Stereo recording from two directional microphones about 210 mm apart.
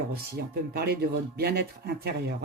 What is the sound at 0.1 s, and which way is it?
Speech, 50° right (ahead or behind).